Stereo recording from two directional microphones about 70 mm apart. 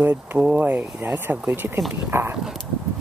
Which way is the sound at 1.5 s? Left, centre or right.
Right.